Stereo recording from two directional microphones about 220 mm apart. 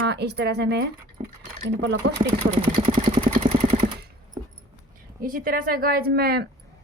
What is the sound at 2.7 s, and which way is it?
Vehicle, 25° right (ahead or behind).